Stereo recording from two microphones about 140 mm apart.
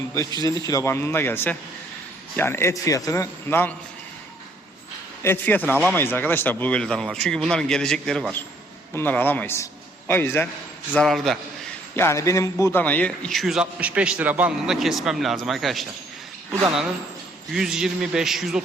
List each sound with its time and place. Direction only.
0.1 s a man's voice: 25° left (ahead or behind)
5.2 s a man's voice: 15° left (ahead or behind)
10.9 s a man's voice: centre (ahead or behind)
11.9 s a man's voice: 20° left (ahead or behind); by 15.9 s centre (ahead or behind)
17.5 s a man's voice: 5° right (ahead or behind)